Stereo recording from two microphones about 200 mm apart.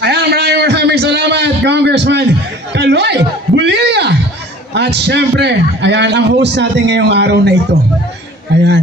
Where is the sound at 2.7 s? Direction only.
60° right (ahead or behind).